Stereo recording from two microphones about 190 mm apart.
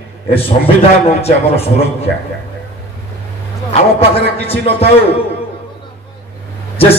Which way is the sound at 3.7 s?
30° left (ahead or behind).